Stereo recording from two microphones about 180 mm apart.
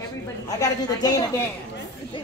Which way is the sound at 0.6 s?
20° left (ahead or behind).